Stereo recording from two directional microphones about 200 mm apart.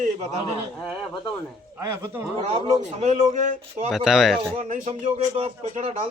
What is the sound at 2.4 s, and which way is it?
Speech, 35° right (ahead or behind).